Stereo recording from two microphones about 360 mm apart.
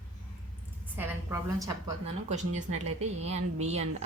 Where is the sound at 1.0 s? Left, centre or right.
Centre.